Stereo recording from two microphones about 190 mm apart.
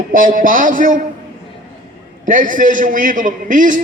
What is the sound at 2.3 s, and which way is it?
A man's voice, 45° right (ahead or behind).